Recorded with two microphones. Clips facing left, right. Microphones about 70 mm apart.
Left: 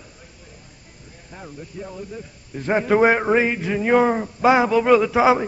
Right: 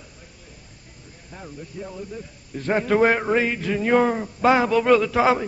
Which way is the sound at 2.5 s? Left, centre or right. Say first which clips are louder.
Left 2 dB; centre.